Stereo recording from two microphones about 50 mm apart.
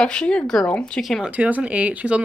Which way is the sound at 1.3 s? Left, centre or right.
Right.